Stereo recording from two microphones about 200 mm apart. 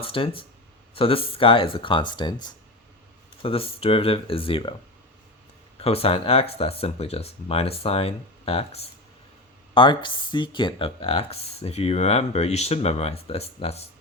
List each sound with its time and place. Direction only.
0.0 s speech: 25° left (ahead or behind)
5.8 s speech: 30° left (ahead or behind)